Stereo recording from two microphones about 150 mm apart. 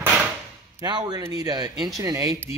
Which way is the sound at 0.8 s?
30° right (ahead or behind).